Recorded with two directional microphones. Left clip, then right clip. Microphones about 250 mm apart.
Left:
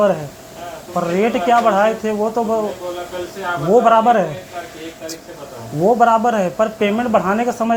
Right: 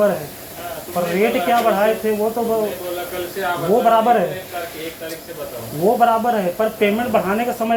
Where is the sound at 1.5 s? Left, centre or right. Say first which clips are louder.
Left 5 dB; left.